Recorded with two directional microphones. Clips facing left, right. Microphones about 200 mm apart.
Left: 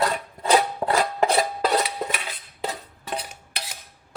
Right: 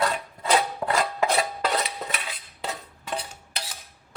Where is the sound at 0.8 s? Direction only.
40° left (ahead or behind).